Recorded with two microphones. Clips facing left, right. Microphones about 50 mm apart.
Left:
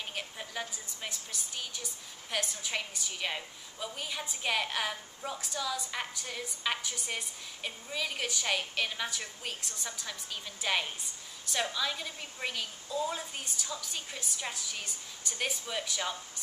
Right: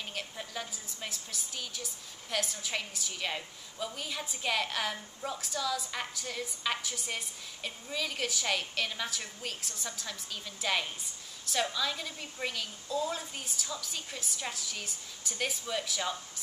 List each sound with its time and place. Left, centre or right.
0.1 s a woman's voice: centre